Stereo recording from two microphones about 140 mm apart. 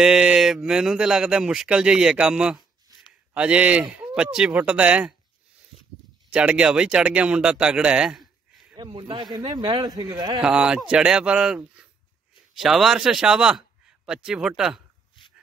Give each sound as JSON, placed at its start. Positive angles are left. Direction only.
{"t": 0.0, "sound": "speech", "side_deg": -5}
{"t": 2.9, "sound": "a sound", "side_deg": -25}
{"t": 3.3, "sound": "speech", "side_deg": -10}
{"t": 6.3, "sound": "speech", "side_deg": -10}
{"t": 8.7, "sound": "a man's voice", "side_deg": -35}
{"t": 10.4, "sound": "a man's voice", "side_deg": -5}